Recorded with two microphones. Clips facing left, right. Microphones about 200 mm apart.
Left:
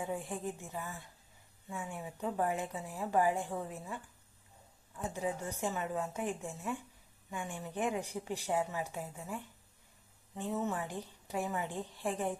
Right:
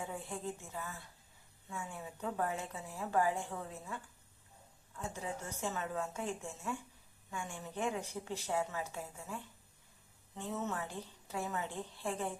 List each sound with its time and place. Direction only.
0.0 s a woman's voice: 15° left (ahead or behind)